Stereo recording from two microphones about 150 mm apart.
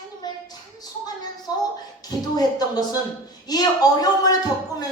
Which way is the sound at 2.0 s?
25° left (ahead or behind).